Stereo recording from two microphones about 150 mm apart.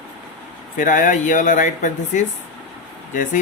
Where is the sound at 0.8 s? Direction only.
60° left (ahead or behind).